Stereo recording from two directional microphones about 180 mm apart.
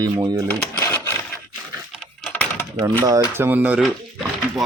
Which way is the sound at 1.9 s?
Centre (ahead or behind).